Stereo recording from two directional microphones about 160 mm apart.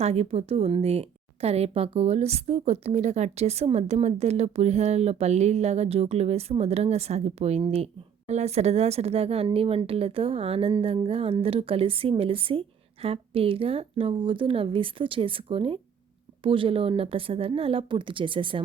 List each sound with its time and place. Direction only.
0.0 s speech: 40° right (ahead or behind)